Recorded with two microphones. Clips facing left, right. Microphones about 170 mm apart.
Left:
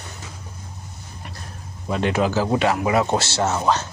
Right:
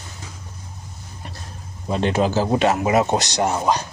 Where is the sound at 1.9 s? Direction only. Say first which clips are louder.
Right 1 dB; 25° right (ahead or behind).